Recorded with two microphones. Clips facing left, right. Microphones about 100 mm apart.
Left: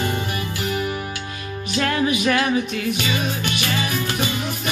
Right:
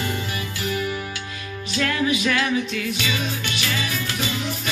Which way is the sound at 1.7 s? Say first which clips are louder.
Left 2 dB; 35° left (ahead or behind).